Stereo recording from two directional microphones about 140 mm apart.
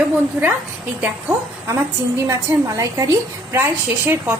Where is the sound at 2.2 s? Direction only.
20° right (ahead or behind).